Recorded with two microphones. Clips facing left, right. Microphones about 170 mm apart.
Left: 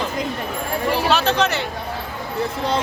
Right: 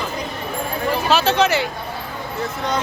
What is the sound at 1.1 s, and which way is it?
Speech, centre (ahead or behind).